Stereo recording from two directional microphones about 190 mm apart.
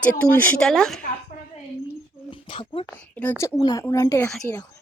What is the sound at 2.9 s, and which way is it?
A woman's voice, 10° left (ahead or behind).